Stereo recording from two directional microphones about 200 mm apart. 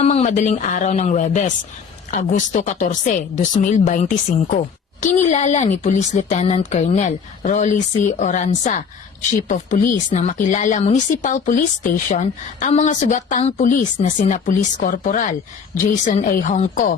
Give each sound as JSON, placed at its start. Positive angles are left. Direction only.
{"t": 0.0, "sound": "speech", "side_deg": 35}